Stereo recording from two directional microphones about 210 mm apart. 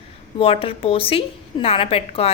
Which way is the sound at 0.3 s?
25° left (ahead or behind).